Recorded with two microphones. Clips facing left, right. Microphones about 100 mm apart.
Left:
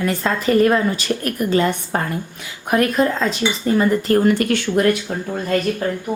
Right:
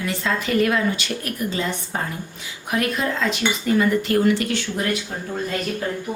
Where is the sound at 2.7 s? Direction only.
45° left (ahead or behind).